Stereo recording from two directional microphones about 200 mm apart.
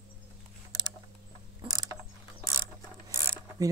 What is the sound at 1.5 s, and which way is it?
Mechanisms, 20° right (ahead or behind).